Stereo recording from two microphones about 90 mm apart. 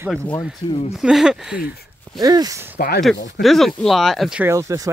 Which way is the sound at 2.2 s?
45° right (ahead or behind).